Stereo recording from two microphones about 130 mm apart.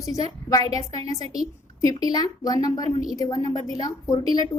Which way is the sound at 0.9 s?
55° right (ahead or behind).